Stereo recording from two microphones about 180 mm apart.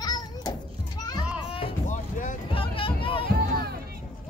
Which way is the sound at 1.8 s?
45° left (ahead or behind).